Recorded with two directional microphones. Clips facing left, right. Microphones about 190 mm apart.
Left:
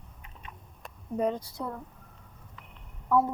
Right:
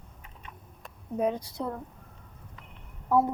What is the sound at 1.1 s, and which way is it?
Speech, 5° right (ahead or behind).